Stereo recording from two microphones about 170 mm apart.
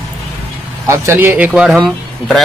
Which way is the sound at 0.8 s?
15° right (ahead or behind).